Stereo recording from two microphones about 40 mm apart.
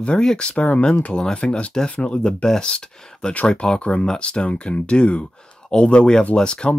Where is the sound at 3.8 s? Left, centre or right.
Left.